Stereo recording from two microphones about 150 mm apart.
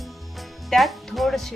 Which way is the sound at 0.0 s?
Centre (ahead or behind).